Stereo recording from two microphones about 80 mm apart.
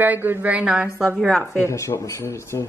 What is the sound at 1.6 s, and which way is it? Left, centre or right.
Speech, left.